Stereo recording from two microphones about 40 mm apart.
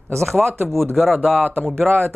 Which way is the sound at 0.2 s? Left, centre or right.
Centre.